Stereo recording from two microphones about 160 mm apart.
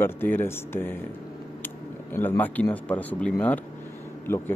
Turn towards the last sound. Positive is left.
turn(degrees=15)  # may be behind; listen again after turning